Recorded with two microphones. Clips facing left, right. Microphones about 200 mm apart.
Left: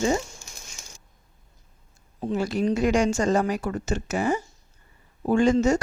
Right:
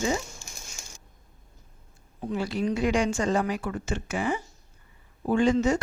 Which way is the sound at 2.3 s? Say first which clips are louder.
Left 3 dB; 45° left (ahead or behind).